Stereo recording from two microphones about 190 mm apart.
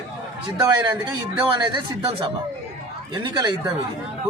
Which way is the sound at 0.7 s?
25° right (ahead or behind).